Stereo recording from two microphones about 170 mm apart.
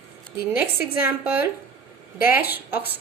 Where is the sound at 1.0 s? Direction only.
10° right (ahead or behind).